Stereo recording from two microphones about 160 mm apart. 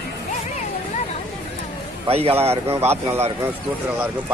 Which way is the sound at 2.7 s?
15° right (ahead or behind).